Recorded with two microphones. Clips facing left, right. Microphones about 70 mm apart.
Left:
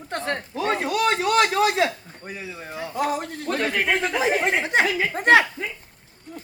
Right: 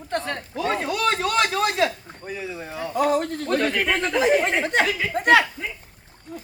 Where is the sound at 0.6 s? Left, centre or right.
Left.